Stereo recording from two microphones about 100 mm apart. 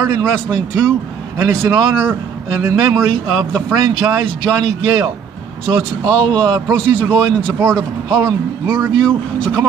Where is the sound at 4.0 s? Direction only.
25° right (ahead or behind).